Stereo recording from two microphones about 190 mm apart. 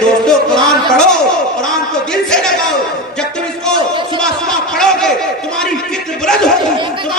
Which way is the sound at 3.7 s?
25° right (ahead or behind).